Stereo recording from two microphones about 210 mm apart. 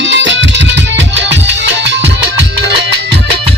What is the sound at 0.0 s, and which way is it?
Music, 60° right (ahead or behind).